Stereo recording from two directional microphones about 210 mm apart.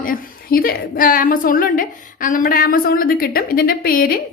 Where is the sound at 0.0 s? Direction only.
45° left (ahead or behind).